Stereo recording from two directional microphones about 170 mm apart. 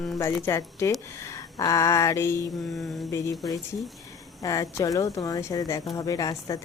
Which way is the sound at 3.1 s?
20° left (ahead or behind).